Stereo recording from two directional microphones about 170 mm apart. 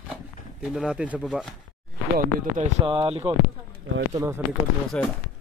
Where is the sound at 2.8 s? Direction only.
30° right (ahead or behind).